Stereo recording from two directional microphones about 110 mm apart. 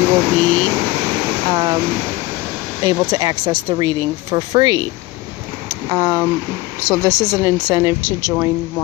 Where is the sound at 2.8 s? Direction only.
40° right (ahead or behind).